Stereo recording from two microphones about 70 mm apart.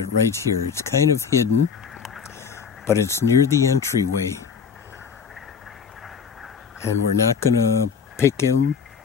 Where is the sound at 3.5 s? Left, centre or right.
Left.